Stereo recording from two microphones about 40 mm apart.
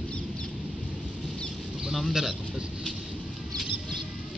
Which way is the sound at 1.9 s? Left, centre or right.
Centre.